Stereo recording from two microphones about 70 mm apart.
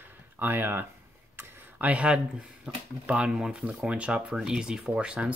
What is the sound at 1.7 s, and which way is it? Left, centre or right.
Speech, centre.